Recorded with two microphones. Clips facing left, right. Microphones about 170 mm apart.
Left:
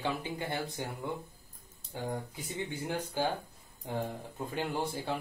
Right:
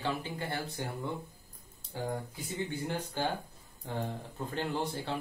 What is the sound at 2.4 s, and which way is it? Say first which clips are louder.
Speech: right 1 dB; 15° left (ahead or behind).